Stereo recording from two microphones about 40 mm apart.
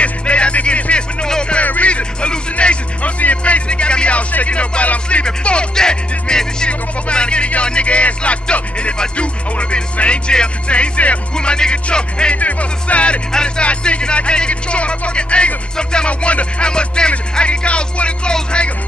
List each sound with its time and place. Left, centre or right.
0.0 s music: left
1.2 s music: centre
1.6 s music: left; by 6.7 s centre
6.7 s speech: left
11.3 s speech: left
12.4 s music: left
13.3 s speech: left